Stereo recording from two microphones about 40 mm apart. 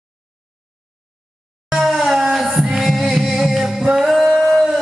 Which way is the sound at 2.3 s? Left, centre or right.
Centre.